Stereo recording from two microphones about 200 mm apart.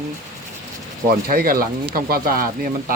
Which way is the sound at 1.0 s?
45° right (ahead or behind).